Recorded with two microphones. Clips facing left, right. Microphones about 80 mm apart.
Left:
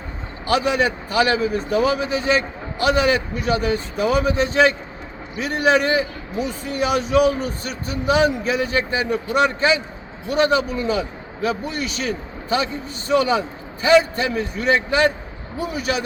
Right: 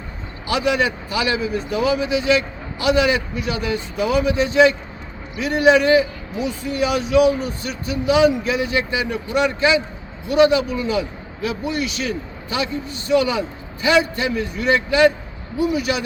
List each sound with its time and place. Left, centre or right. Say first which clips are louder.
0.4 s a man's voice: left 1 dB; left